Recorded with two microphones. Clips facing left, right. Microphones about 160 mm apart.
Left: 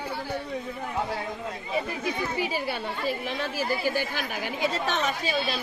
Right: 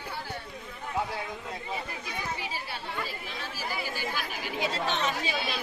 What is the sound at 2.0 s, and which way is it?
A woman's voice, 70° left (ahead or behind).